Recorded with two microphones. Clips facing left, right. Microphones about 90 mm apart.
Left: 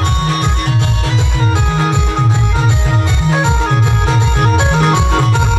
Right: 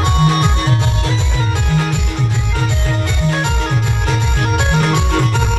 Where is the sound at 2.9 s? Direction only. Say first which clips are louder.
Left 3 dB; 20° left (ahead or behind).